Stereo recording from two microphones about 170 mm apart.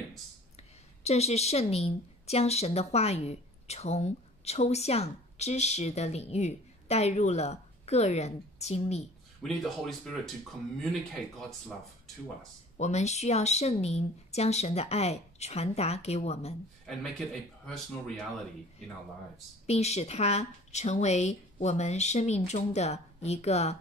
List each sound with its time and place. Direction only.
0.6 s a woman's voice: 40° left (ahead or behind)
9.4 s speech: centre (ahead or behind)
12.7 s speech: 40° left (ahead or behind)
17.6 s speech: 5° left (ahead or behind)
19.6 s speech: 40° left (ahead or behind)